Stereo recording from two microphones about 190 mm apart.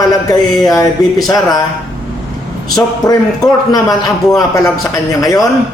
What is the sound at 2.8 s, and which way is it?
A man's voice, 20° left (ahead or behind).